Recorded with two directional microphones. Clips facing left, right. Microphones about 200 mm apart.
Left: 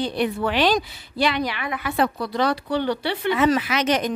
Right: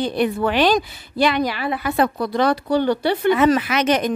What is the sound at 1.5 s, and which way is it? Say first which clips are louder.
A woman's voice: right 4 dB; 35° right (ahead or behind).